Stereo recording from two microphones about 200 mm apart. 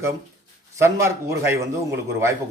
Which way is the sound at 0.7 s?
15° right (ahead or behind).